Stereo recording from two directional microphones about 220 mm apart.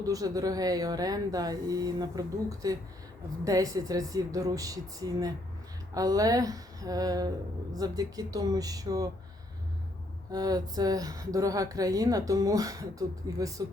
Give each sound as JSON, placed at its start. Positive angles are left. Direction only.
{"t": 0.0, "sound": "speech", "side_deg": -15}
{"t": 10.3, "sound": "speech", "side_deg": -15}